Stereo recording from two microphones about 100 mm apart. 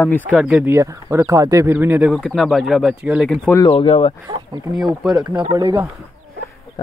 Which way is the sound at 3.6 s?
65° left (ahead or behind).